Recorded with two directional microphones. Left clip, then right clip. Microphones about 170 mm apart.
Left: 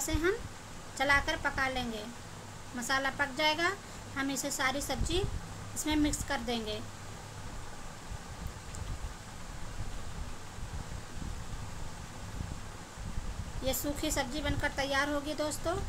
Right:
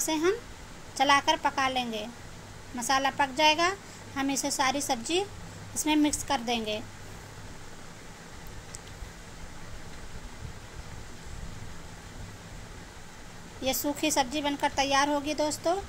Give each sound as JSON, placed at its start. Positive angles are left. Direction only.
{"t": 0.0, "sound": "a woman's voice", "side_deg": -25}
{"t": 6.2, "sound": "a woman's voice", "side_deg": -25}
{"t": 13.7, "sound": "a woman's voice", "side_deg": -25}